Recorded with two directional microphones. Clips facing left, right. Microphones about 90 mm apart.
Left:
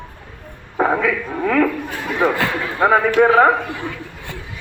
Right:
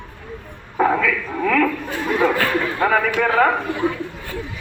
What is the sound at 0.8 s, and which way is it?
Speech, 25° left (ahead or behind).